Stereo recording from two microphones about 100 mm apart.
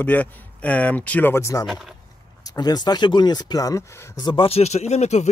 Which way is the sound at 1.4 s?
35° left (ahead or behind).